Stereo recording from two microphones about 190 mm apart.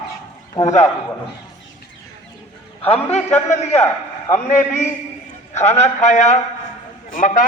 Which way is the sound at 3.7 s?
15° left (ahead or behind).